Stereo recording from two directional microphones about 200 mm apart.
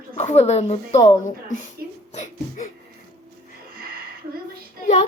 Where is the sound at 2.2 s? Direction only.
40° left (ahead or behind).